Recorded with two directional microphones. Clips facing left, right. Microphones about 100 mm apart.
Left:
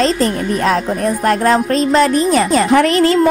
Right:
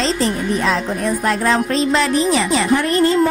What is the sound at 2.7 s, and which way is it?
Speech, 85° left.